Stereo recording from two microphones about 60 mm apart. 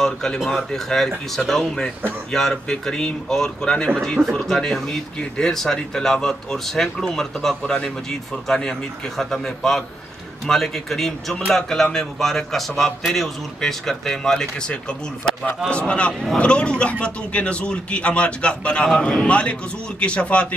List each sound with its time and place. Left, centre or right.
0.0 s a man's voice: centre